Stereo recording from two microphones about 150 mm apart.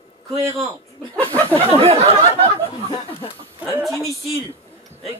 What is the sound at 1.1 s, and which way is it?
Speech, 10° left (ahead or behind).